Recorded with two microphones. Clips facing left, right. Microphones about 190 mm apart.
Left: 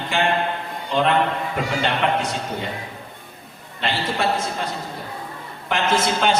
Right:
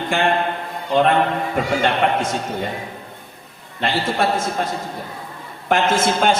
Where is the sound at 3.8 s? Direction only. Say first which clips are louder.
Right 3 dB; 45° right (ahead or behind).